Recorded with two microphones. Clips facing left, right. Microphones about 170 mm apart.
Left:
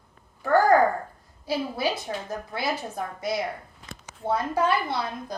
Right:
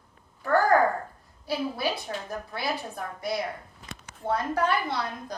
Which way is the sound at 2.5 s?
15° left (ahead or behind).